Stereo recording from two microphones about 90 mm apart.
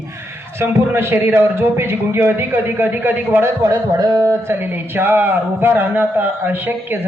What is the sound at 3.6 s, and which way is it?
Speech, 45° right (ahead or behind).